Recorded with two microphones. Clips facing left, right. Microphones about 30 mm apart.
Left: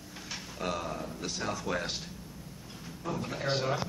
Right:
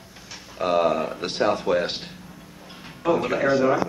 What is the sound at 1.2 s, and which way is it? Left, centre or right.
Speech, right.